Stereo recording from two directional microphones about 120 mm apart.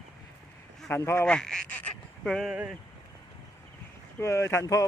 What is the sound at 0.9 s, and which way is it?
Speech, 20° left (ahead or behind).